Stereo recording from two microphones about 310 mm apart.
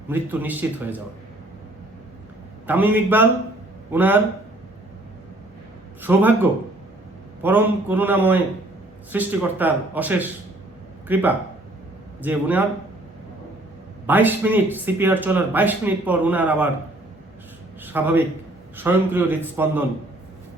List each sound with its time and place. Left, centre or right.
0.1 s speech: centre
2.6 s a man's voice: centre
6.0 s a man's voice: centre
14.1 s speech: centre
17.8 s a man's voice: centre